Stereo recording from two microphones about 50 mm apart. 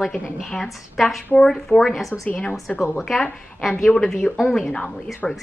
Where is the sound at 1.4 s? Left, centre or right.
Centre.